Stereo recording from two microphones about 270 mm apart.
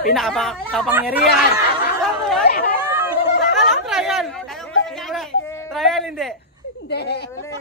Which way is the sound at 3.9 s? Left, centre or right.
Centre.